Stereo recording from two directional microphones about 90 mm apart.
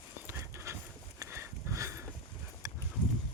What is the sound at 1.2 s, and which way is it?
Sniff, 35° right (ahead or behind).